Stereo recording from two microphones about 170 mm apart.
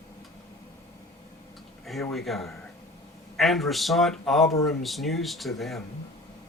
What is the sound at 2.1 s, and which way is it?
Speech, centre (ahead or behind).